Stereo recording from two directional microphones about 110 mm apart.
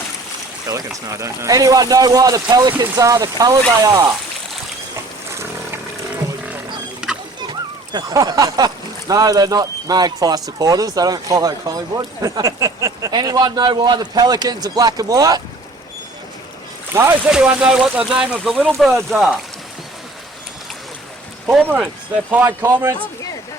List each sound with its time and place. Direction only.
0.7 s speech: 30° right (ahead or behind)
2.8 s speech: 30° right (ahead or behind)
7.9 s speech: 35° right (ahead or behind)
12.2 s a sound: 30° right (ahead or behind)
13.1 s speech: 40° right (ahead or behind)
16.9 s a sound: 25° right (ahead or behind)
17.2 s speech: 10° right (ahead or behind)
21.4 s speech: 15° right (ahead or behind)
22.4 s a sound: 20° right (ahead or behind)